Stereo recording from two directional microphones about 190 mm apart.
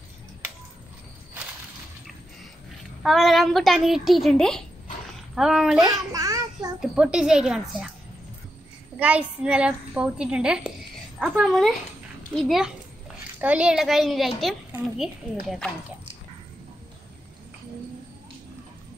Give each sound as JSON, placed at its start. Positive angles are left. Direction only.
{"t": 3.0, "sound": "a woman's voice", "side_deg": 0}
{"t": 5.9, "sound": "child singing", "side_deg": -20}
{"t": 6.8, "sound": "a woman's voice", "side_deg": -5}
{"t": 8.9, "sound": "a woman's voice", "side_deg": -10}